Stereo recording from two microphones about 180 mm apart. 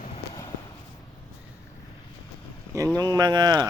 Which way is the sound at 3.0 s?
20° right (ahead or behind).